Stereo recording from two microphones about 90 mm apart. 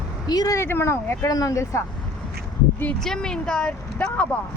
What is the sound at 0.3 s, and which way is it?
Speech, 45° left (ahead or behind).